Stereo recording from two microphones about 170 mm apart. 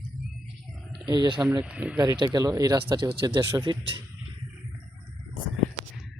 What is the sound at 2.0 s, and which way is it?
Speech, 25° right (ahead or behind).